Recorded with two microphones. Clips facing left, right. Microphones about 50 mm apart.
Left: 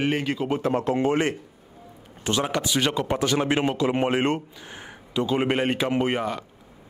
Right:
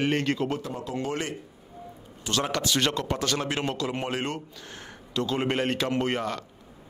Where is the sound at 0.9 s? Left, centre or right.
Left.